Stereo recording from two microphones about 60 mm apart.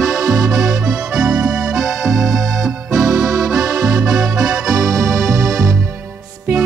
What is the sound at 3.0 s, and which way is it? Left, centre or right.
Accordion, right.